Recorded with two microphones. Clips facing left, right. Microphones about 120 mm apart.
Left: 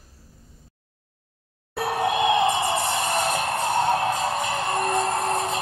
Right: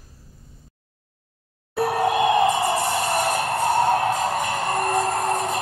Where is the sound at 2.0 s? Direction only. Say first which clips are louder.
Right 2 dB; 20° left (ahead or behind).